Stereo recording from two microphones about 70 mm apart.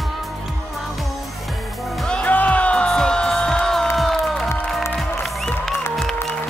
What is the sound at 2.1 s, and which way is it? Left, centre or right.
Music, left.